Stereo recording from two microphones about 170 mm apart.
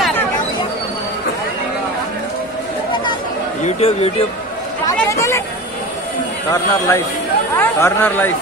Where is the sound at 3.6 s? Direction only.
35° left (ahead or behind).